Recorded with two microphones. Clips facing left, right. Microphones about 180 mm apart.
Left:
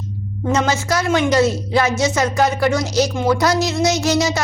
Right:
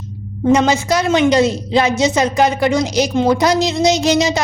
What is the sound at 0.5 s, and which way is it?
A woman's voice, 15° right (ahead or behind).